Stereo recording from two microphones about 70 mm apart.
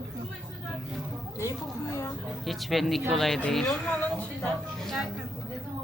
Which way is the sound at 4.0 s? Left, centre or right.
Left.